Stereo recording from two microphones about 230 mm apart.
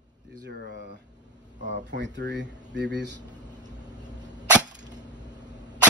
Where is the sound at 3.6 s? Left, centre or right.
Centre.